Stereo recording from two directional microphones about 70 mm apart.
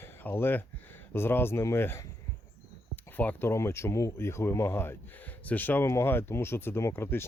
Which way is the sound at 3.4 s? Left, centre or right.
Left.